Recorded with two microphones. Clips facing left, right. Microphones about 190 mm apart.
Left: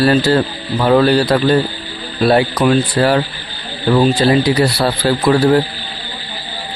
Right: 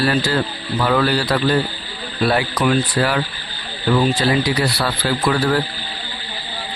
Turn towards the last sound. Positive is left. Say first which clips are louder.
# left 6 dB
turn(degrees=35)  # may be behind; listen again after turning